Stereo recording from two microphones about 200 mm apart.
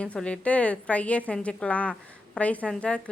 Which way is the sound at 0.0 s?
5° left (ahead or behind).